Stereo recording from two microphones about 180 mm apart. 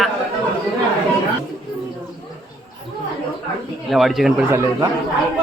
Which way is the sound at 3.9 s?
Centre (ahead or behind).